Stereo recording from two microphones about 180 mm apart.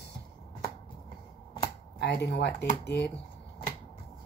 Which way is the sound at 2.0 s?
65° left (ahead or behind).